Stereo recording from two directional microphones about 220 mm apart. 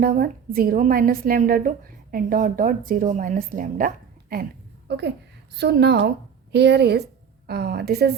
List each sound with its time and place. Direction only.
0.0 s a woman's voice: 40° right (ahead or behind)